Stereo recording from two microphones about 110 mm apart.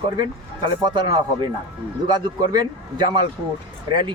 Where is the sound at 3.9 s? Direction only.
45° right (ahead or behind).